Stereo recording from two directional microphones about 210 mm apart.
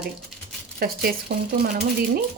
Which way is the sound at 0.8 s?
45° right (ahead or behind).